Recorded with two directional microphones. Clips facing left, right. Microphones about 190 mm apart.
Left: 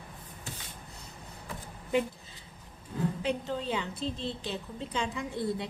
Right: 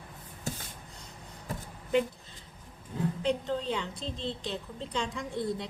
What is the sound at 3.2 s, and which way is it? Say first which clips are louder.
A woman's voice: right 2 dB; 5° left (ahead or behind).